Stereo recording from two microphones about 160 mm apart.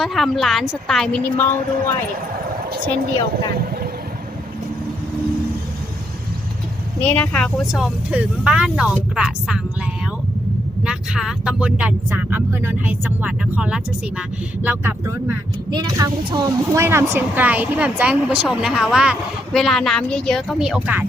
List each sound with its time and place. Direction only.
0.0 s speech: centre (ahead or behind)
2.6 s a woman's voice: 80° right
7.0 s speech: 5° left (ahead or behind)
10.8 s speech: 5° right (ahead or behind)
15.7 s speech: 25° right (ahead or behind); by 21.0 s 10° right (ahead or behind)